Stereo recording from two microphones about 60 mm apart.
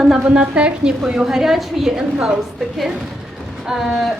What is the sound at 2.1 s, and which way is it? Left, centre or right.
Speech, right.